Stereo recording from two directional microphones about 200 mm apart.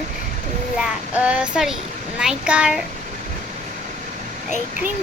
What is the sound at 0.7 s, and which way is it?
Child singing, 5° right (ahead or behind).